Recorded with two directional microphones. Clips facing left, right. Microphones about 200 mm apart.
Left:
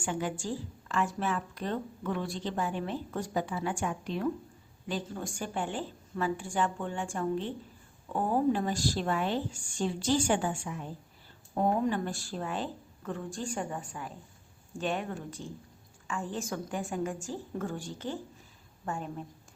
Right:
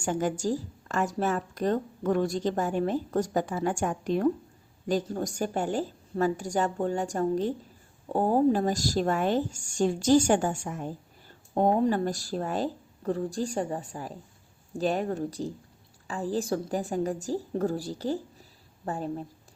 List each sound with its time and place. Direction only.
0.0 s a woman's voice: 40° right (ahead or behind)